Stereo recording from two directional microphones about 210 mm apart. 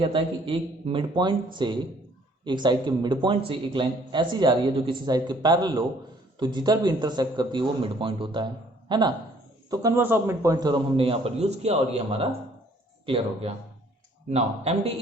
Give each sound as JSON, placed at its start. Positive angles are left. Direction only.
{"t": 0.0, "sound": "a man's voice", "side_deg": -25}